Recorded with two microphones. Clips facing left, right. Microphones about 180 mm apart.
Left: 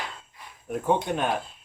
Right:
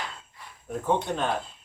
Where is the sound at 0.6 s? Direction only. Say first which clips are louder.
Left 2 dB; 10° left (ahead or behind).